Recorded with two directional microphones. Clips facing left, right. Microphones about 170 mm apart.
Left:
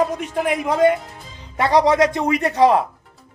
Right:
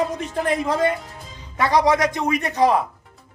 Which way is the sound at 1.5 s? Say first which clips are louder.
Left 3 dB; 25° left (ahead or behind).